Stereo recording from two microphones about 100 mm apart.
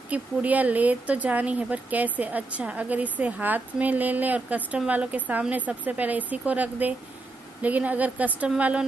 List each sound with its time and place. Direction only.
0.1 s speech: 15° right (ahead or behind)